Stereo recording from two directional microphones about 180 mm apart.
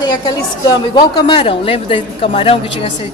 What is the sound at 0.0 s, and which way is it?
A woman's voice, 20° left (ahead or behind).